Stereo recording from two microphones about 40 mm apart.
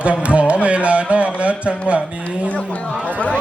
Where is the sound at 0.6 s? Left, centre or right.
Right.